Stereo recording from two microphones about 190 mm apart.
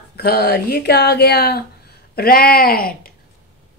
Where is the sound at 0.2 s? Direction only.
55° left (ahead or behind).